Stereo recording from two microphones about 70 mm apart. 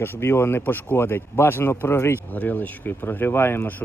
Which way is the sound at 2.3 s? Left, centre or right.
Left.